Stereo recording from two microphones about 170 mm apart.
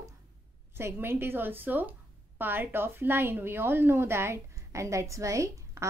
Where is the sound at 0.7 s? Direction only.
15° right (ahead or behind).